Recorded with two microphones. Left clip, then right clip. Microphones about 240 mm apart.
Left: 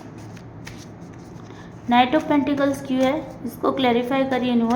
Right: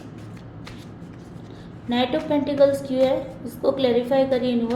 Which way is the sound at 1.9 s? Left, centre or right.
Left.